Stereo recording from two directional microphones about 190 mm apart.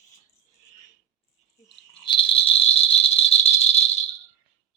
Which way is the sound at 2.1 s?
25° left (ahead or behind).